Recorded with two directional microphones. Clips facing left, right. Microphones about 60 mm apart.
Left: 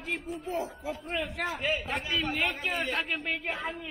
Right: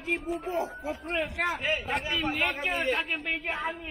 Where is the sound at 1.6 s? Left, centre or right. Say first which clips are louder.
Right 1 dB; centre.